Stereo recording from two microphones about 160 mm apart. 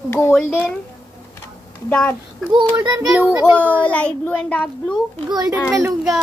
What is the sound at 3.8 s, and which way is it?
Speech, 10° left (ahead or behind).